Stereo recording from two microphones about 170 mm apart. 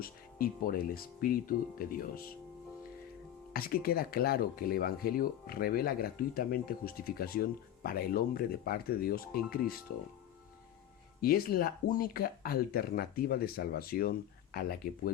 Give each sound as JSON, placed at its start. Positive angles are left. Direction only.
{"t": 0.0, "sound": "speech", "side_deg": 60}
{"t": 3.5, "sound": "speech", "side_deg": 60}
{"t": 11.2, "sound": "speech", "side_deg": 60}